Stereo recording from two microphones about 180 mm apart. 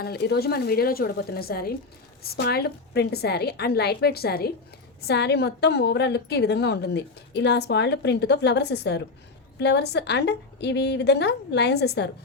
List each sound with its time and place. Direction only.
0.0 s a woman's voice: 65° left (ahead or behind)